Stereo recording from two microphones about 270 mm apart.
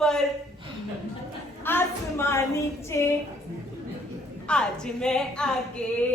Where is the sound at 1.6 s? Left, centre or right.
Centre.